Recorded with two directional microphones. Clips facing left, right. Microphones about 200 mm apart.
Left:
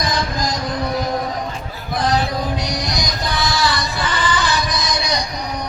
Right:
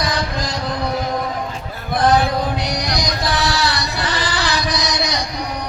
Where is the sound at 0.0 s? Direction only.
70° right (ahead or behind).